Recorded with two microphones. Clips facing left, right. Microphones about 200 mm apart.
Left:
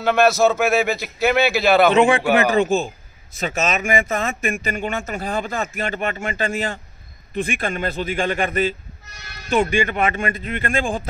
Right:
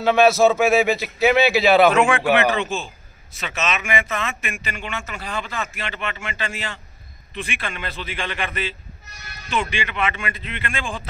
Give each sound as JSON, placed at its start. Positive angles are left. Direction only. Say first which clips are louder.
{"t": 0.0, "sound": "a man's voice", "louder": "right 1 dB", "side_deg": -5}
{"t": 2.0, "sound": "a man's voice", "louder": "left 3 dB", "side_deg": 35}
{"t": 2.3, "sound": "speech", "louder": "left 3 dB", "side_deg": 45}